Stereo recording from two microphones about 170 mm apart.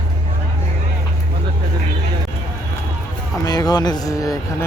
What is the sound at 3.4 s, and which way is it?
Speech, 25° left (ahead or behind).